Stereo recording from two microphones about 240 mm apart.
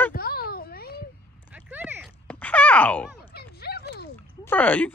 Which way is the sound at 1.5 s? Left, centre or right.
Centre.